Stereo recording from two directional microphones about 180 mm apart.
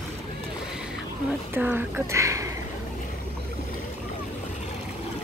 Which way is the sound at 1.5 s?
10° right (ahead or behind).